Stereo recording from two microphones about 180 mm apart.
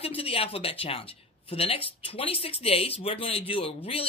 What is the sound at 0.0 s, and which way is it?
Speech, 30° left (ahead or behind).